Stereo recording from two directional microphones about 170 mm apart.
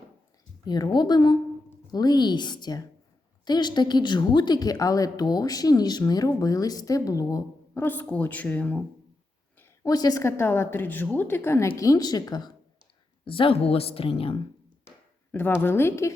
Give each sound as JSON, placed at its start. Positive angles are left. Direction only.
{"t": 0.6, "sound": "a woman's voice", "side_deg": 25}
{"t": 9.6, "sound": "a woman's voice", "side_deg": 20}
{"t": 14.8, "sound": "a sound", "side_deg": 15}
{"t": 15.6, "sound": "a woman's voice", "side_deg": 15}